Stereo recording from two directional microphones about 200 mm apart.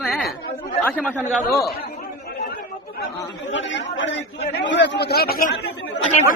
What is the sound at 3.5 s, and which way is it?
A man's voice, 65° left (ahead or behind).